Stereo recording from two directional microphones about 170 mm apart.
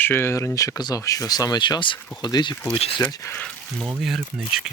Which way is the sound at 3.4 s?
Centre (ahead or behind).